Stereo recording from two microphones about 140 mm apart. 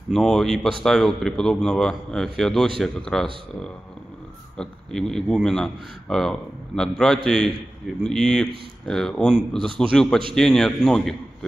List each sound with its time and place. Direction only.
0.1 s speech: centre (ahead or behind)
4.6 s speech: 5° left (ahead or behind)